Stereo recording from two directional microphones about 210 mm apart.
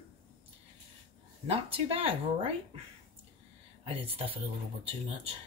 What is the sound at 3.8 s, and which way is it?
Speech, 25° right (ahead or behind).